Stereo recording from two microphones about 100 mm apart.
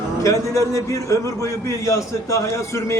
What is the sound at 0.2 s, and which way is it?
A man's voice, 30° left (ahead or behind).